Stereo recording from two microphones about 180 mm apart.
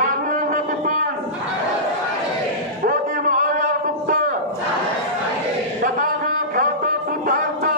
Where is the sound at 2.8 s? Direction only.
50° right (ahead or behind).